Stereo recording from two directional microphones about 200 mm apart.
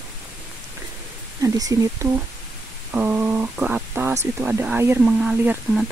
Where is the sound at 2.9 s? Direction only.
10° right (ahead or behind).